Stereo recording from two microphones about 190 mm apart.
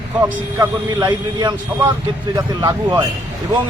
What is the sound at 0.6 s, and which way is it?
A man's voice, 20° right (ahead or behind).